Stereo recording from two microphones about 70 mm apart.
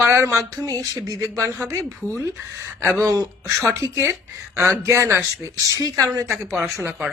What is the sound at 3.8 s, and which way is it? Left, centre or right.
Speech, right.